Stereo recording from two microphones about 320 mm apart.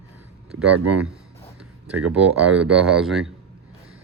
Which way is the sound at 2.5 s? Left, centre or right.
Centre.